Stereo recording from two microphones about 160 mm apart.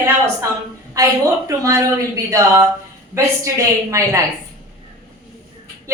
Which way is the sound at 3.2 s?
20° right (ahead or behind).